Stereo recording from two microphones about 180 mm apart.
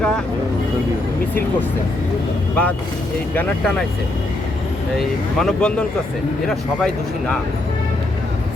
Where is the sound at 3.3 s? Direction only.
5° left (ahead or behind).